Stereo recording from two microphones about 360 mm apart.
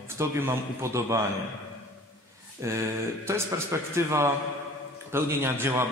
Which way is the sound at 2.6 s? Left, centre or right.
Centre.